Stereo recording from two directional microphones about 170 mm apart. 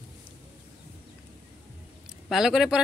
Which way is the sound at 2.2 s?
Centre (ahead or behind).